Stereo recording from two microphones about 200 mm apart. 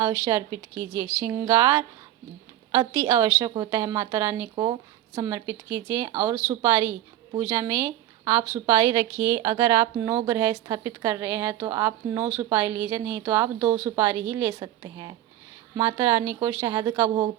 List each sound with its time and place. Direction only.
0.3 s a woman's voice: 15° right (ahead or behind)
3.1 s a woman's voice: 15° right (ahead or behind)